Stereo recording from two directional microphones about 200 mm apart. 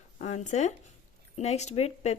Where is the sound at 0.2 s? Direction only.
35° left (ahead or behind).